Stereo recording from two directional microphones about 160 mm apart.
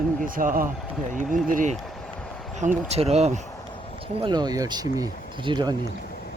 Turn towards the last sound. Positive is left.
turn(degrees=-25)  # may be behind; listen again after turning